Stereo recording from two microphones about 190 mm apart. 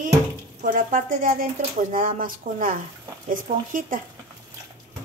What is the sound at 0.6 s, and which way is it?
Speech, 45° right (ahead or behind).